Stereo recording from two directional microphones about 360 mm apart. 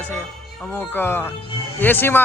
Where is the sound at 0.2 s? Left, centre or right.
Centre.